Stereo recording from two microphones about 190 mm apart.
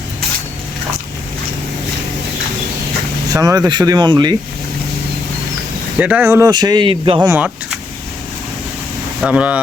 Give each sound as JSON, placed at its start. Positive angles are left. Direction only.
{"t": 3.2, "sound": "speech", "side_deg": -20}
{"t": 6.0, "sound": "speech", "side_deg": -5}
{"t": 7.2, "sound": "speech", "side_deg": -10}
{"t": 9.2, "sound": "speech", "side_deg": -5}